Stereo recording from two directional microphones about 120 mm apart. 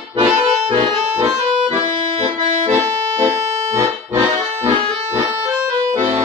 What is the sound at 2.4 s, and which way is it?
Accordion, 60° right (ahead or behind).